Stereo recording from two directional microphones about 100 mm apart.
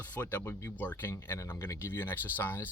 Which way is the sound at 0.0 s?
20° left (ahead or behind).